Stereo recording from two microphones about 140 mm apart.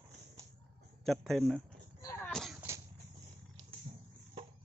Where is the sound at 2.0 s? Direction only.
20° left (ahead or behind).